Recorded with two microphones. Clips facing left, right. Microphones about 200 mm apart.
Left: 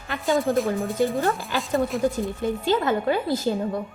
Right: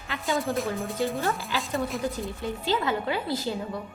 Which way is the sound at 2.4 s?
50° left (ahead or behind).